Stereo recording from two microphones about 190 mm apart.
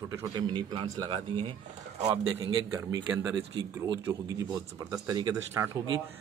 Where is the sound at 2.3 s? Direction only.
15° right (ahead or behind).